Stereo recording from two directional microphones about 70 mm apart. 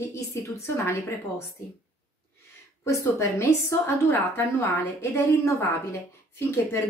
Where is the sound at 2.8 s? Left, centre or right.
Left.